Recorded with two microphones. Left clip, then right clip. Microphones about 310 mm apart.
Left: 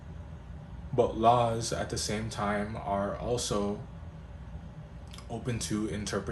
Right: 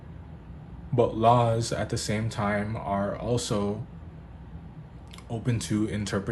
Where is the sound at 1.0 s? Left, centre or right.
Right.